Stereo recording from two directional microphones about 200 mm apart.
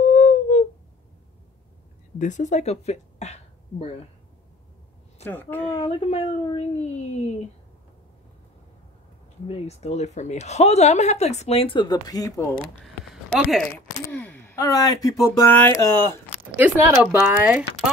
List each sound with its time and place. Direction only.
0.1 s a sound: 35° left (ahead or behind)
2.1 s a woman's voice: 40° left (ahead or behind)
5.2 s a woman's voice: 10° left (ahead or behind)
5.9 s a woman's voice: 30° left (ahead or behind)
9.5 s a woman's voice: 30° left (ahead or behind); by 12.4 s 15° left (ahead or behind)
12.8 s a sound: centre (ahead or behind)
14.0 s speech: 10° left (ahead or behind)
16.5 s speech: 10° right (ahead or behind)